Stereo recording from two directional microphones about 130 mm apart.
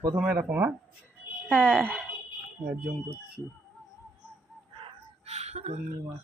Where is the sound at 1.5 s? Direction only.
10° left (ahead or behind).